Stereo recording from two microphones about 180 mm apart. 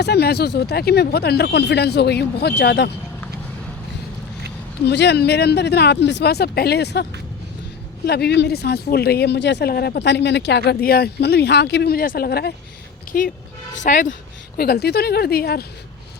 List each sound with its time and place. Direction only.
0.0 s speech: 65° left (ahead or behind)
4.9 s speech: 70° left (ahead or behind)
13.1 s speech: 50° left (ahead or behind)